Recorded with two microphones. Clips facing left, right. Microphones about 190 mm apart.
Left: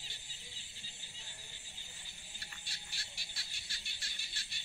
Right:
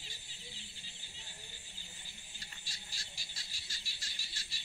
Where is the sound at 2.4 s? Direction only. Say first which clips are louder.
Left 1 dB; 65° left (ahead or behind).